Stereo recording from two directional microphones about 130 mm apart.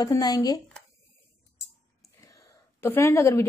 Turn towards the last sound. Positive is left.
turn(degrees=20)  # may be behind; listen again after turning